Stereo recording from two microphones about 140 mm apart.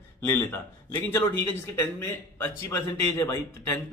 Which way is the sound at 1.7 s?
20° left (ahead or behind).